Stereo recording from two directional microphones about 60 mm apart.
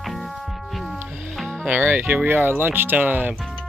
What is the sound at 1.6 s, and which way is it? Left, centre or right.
Music, right.